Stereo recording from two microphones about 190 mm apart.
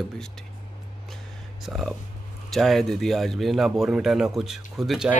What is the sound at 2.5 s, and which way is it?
Speech, centre (ahead or behind).